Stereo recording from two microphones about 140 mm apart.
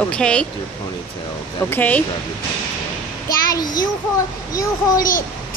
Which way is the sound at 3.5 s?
25° left (ahead or behind).